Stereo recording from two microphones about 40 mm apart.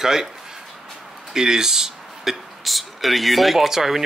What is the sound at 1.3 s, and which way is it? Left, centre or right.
Speech, centre.